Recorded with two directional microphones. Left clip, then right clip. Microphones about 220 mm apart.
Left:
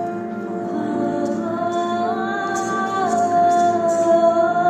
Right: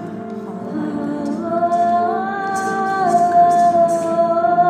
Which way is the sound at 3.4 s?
Centre (ahead or behind).